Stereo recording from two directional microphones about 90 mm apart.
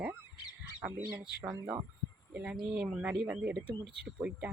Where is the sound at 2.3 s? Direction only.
15° right (ahead or behind).